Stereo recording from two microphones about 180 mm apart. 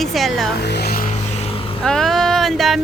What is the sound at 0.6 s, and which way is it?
Music, 65° left (ahead or behind).